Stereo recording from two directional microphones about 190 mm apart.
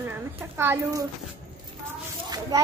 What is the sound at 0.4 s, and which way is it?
Speech, 10° right (ahead or behind).